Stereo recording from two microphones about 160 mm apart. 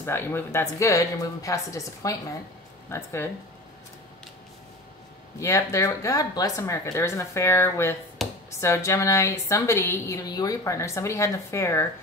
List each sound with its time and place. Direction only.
0.0 s a woman's voice: 15° left (ahead or behind)
5.4 s a woman's voice: 20° left (ahead or behind)